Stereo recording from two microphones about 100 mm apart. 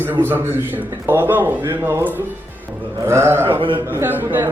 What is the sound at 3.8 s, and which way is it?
Speech, 20° right (ahead or behind).